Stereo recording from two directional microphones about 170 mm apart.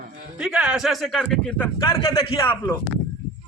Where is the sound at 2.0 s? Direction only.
30° left (ahead or behind).